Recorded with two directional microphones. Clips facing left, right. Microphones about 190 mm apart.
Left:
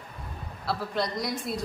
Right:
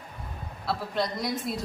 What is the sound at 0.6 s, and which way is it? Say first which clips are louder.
Speech: even; centre (ahead or behind).